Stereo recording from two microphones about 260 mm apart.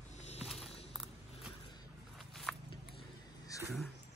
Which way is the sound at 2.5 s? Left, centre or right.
Centre.